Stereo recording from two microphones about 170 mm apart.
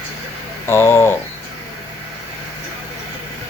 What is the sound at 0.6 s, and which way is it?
Speech, 15° left (ahead or behind).